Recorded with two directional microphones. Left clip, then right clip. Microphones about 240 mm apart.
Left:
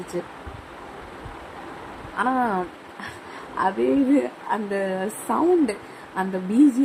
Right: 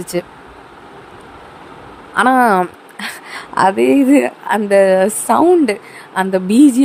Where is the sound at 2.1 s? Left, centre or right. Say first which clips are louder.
Right 12 dB; right.